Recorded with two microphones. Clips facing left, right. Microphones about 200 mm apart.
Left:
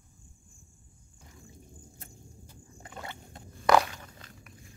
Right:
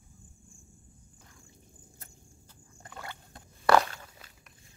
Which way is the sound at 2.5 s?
20° left (ahead or behind).